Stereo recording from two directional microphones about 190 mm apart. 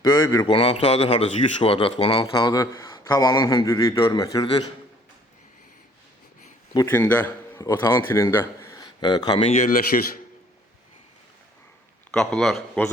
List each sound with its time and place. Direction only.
0.0 s a man's voice: 20° left (ahead or behind)
6.7 s speech: 10° left (ahead or behind)
9.6 s speech: 45° left (ahead or behind)
12.1 s speech: 5° left (ahead or behind)